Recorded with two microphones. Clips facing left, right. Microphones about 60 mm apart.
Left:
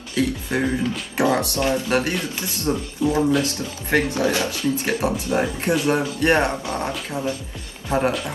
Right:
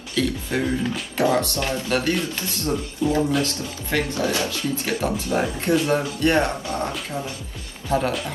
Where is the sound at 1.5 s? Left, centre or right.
Left.